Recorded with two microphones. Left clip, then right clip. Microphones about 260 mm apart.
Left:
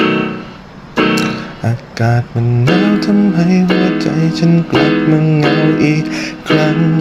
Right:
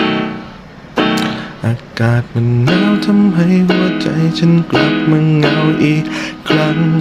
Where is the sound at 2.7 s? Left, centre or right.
Centre.